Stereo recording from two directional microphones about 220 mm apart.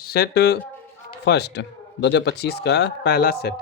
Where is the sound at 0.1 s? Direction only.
45° left (ahead or behind).